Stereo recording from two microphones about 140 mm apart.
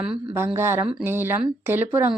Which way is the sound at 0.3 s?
15° right (ahead or behind).